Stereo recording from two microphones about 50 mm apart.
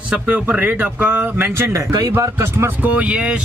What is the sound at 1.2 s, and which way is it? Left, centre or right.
Speech, right.